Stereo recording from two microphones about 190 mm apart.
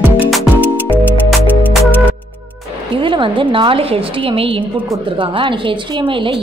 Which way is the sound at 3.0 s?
25° right (ahead or behind).